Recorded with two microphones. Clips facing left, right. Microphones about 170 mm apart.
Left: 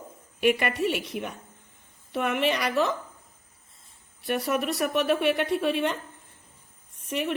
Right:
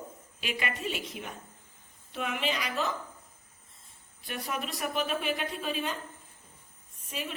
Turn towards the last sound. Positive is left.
turn(degrees=70)  # may be behind; listen again after turning